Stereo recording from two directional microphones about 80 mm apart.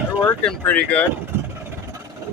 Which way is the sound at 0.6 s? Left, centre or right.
Centre.